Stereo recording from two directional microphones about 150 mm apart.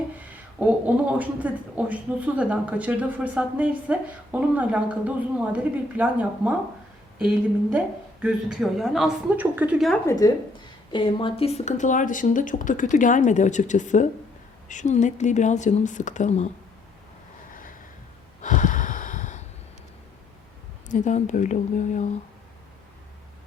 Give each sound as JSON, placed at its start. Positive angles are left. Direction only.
{"t": 0.2, "sound": "a woman's voice", "side_deg": -10}
{"t": 10.1, "sound": "speech", "side_deg": 25}
{"t": 10.9, "sound": "a woman's voice", "side_deg": 35}
{"t": 18.4, "sound": "a sound", "side_deg": 60}
{"t": 20.8, "sound": "a woman's voice", "side_deg": 55}